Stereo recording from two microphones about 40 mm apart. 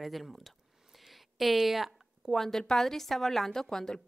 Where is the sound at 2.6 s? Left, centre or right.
Centre.